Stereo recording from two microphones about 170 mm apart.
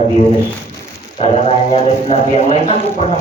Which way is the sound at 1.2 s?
35° left (ahead or behind).